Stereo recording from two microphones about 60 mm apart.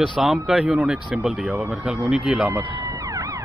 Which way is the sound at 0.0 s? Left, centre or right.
Centre.